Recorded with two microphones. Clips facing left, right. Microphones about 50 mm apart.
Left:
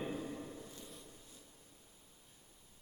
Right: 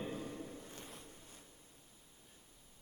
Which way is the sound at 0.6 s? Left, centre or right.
Right.